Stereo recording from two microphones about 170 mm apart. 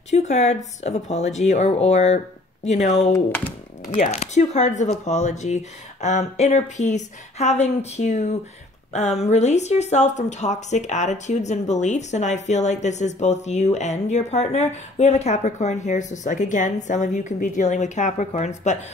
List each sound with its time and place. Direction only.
0.1 s speech: 40° left (ahead or behind)
3.1 s speech: 10° left (ahead or behind)
3.9 s speech: 40° left (ahead or behind)